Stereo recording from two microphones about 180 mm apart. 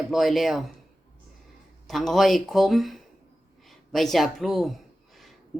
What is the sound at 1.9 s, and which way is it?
A woman's voice, centre (ahead or behind).